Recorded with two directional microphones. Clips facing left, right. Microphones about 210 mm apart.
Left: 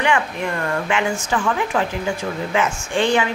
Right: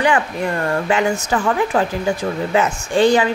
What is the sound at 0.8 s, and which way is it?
Speech, 40° right (ahead or behind).